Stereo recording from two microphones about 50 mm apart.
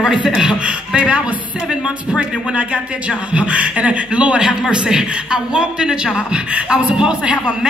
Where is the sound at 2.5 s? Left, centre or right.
Right.